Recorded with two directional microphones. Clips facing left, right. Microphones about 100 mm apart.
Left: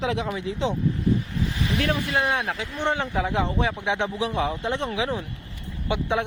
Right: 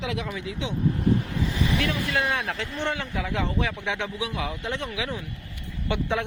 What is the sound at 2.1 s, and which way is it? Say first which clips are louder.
Speech: left 2 dB; 25° left (ahead or behind).